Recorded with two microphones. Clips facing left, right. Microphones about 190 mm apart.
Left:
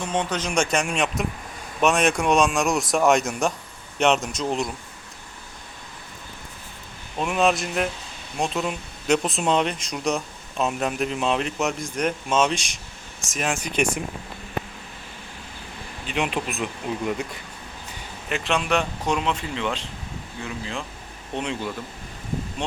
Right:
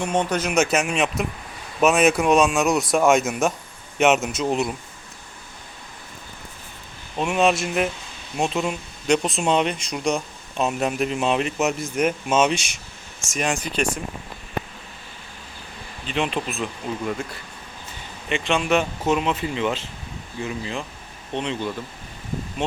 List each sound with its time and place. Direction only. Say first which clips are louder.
0.0 s speech: right 3 dB; 10° right (ahead or behind)
7.2 s speech: right 2 dB; centre (ahead or behind)
16.0 s speech: right 1 dB; 10° left (ahead or behind)
18.3 s speech: right 3 dB; centre (ahead or behind)